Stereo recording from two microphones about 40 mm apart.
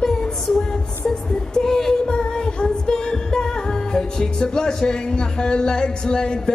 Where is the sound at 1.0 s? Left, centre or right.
Centre.